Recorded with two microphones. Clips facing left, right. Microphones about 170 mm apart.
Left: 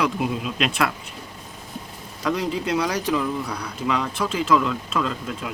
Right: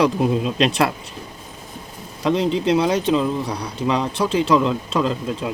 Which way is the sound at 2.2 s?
25° right (ahead or behind).